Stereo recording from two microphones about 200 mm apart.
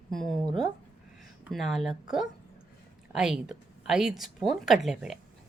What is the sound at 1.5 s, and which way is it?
Speech, centre (ahead or behind).